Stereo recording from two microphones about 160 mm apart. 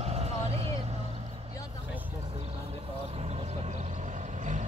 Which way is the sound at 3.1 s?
40° right (ahead or behind).